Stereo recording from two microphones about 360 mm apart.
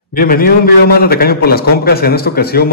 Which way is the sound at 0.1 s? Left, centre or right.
Left.